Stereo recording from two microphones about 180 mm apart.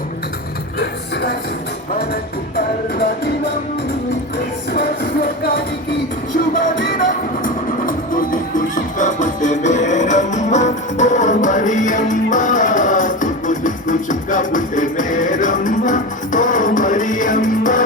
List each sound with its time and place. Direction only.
0.8 s music: 65° left (ahead or behind)
7.4 s music: 50° left (ahead or behind)